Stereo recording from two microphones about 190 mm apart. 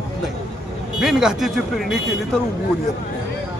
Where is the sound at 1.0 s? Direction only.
5° right (ahead or behind).